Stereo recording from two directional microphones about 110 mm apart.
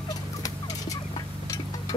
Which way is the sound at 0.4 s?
35° left (ahead or behind).